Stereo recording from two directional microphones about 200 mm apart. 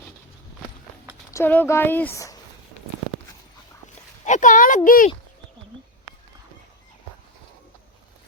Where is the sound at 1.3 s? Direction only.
10° left (ahead or behind).